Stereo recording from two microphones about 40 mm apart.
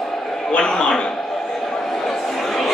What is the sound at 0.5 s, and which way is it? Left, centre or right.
Speech, centre.